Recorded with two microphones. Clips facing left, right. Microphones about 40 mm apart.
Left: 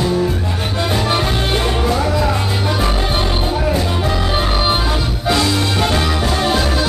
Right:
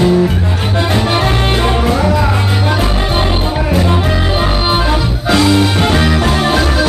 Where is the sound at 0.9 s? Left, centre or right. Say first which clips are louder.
Right 3 dB; centre.